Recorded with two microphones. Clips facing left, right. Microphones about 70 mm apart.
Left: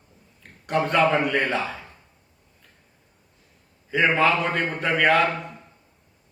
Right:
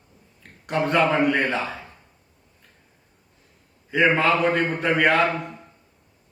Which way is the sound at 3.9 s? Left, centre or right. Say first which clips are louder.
Right 1 dB; centre.